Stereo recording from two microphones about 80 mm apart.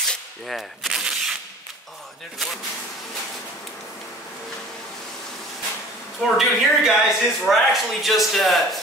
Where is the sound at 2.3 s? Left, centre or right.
Centre.